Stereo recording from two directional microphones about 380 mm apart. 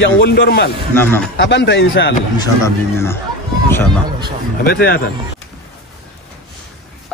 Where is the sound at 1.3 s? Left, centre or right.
Left.